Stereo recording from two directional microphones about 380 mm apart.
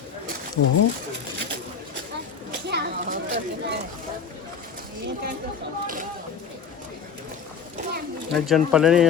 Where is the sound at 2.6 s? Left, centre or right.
Right.